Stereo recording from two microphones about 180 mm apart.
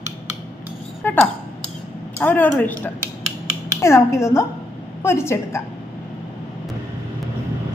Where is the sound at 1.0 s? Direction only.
10° left (ahead or behind).